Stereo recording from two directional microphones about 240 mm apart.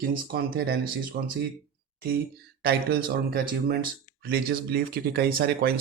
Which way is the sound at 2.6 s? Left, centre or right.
Right.